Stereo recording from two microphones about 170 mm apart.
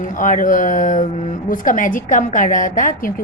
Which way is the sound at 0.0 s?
50° left (ahead or behind).